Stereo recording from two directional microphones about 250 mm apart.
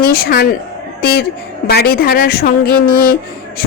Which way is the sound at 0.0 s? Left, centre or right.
Left.